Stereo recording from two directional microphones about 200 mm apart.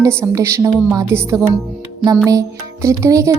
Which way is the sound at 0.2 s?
15° right (ahead or behind).